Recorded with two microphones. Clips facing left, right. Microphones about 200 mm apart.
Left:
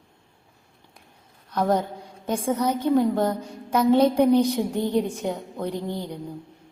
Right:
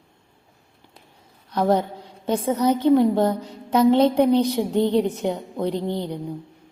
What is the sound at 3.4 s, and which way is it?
Music, 10° left (ahead or behind).